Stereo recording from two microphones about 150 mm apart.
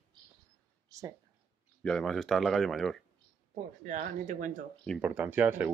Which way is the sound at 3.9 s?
60° right (ahead or behind).